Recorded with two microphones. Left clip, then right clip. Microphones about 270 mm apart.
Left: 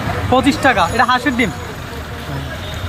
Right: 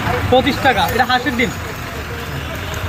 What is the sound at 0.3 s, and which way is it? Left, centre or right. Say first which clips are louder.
Speech: left 1 dB; centre.